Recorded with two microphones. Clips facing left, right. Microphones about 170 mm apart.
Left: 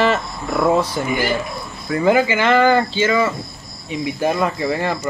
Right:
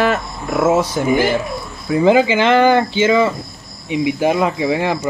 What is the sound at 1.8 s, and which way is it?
Speech, 15° right (ahead or behind).